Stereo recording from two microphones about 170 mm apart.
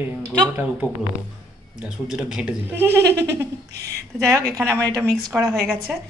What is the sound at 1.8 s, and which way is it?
Speech, 5° right (ahead or behind).